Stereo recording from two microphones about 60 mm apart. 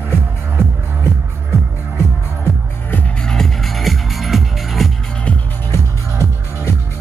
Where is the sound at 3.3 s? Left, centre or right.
Centre.